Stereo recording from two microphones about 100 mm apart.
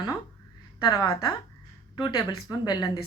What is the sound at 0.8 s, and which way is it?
A woman's voice, 40° left (ahead or behind).